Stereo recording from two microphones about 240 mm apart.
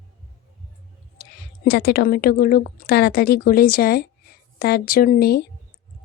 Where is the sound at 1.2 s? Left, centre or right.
Left.